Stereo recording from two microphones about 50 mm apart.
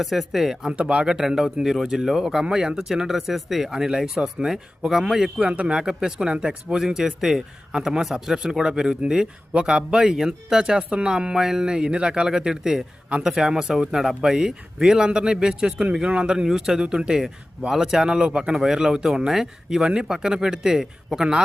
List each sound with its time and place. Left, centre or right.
0.0 s speech: centre
0.7 s speech: right
5.4 s speech: right
10.8 s speech: right